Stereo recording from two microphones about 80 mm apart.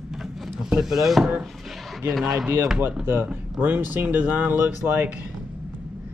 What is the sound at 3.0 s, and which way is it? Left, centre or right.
Speech, right.